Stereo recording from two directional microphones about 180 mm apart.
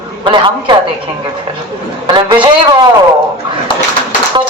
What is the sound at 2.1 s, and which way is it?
Speech, 25° right (ahead or behind).